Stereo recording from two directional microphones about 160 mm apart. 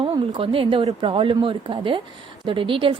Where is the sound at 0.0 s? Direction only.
35° right (ahead or behind).